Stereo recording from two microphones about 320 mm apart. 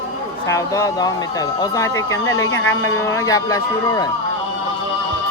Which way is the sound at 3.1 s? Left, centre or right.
Centre.